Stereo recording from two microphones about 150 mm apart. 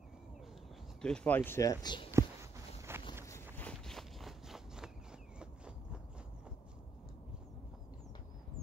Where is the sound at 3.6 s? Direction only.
5° left (ahead or behind).